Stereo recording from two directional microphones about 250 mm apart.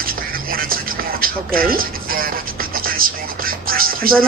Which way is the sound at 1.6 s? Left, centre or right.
Right.